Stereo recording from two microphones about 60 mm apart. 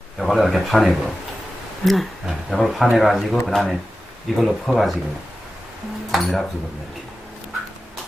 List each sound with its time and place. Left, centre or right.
0.2 s speech: centre
6.1 s speech: centre